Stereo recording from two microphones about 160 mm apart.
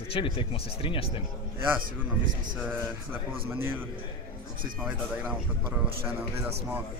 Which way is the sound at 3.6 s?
15° right (ahead or behind).